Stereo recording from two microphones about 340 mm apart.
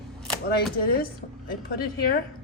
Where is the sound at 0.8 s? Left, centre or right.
Left.